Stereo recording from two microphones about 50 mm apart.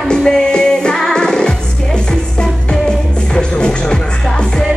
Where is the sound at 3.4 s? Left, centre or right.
Centre.